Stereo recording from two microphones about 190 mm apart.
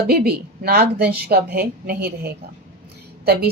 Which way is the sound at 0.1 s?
55° right (ahead or behind).